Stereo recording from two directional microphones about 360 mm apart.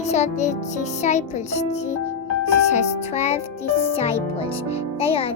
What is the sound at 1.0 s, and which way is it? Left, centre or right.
A child's voice, centre.